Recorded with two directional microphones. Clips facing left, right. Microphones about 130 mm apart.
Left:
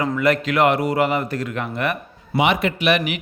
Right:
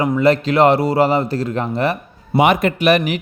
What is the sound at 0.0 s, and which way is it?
A man's voice, 30° right (ahead or behind).